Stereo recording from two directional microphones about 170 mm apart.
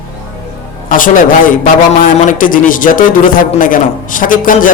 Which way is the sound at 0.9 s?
55° left (ahead or behind).